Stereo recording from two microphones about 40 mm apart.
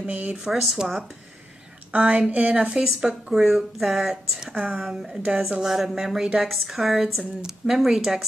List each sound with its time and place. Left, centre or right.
0.0 s speech: right
0.4 s speech: centre
1.9 s a woman's voice: right; by 8.3 s centre